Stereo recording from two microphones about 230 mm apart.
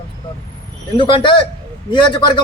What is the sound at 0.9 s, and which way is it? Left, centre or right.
Speech, left.